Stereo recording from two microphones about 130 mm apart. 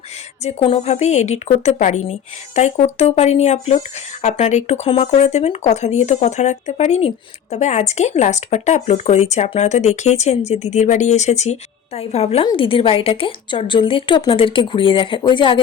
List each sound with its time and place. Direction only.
0.4 s a woman's voice: 50° left (ahead or behind)